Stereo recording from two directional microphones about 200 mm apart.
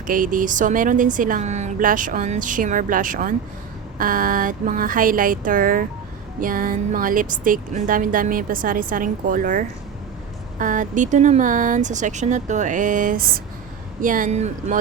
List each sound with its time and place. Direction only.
0.1 s speech: 40° right (ahead or behind)